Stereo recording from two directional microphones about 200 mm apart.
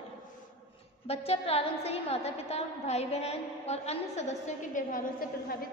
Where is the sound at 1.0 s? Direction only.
30° left (ahead or behind).